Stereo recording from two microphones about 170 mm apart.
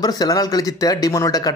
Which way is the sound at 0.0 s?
20° left (ahead or behind).